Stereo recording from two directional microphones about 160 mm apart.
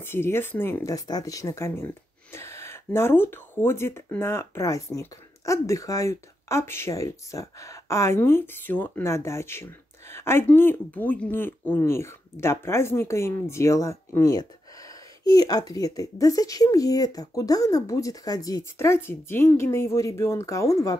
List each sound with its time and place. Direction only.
0.0 s speech: 15° left (ahead or behind)